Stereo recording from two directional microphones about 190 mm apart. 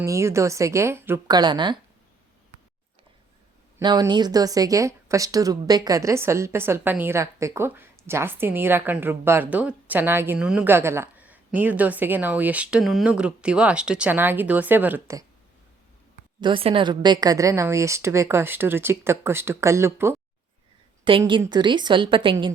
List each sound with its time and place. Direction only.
0.0 s speech: 15° right (ahead or behind)
3.8 s speech: 20° right (ahead or behind)
16.4 s speech: 25° right (ahead or behind)
21.0 s a woman's voice: 25° right (ahead or behind)